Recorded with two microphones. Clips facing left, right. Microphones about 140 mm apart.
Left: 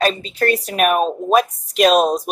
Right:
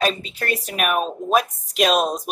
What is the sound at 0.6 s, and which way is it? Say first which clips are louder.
Speech: left 3 dB; 35° left (ahead or behind).